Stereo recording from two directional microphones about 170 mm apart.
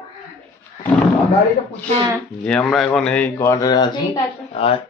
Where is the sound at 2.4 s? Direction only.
5° left (ahead or behind); by 4.2 s 25° left (ahead or behind).